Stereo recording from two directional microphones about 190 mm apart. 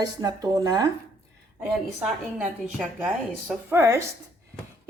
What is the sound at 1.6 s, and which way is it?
A woman's voice, 5° right (ahead or behind).